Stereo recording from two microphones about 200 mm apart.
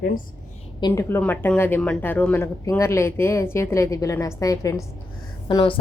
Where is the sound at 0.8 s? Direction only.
20° left (ahead or behind).